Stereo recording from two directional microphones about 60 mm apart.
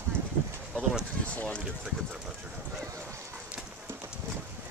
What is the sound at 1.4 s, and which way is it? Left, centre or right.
Speech, left.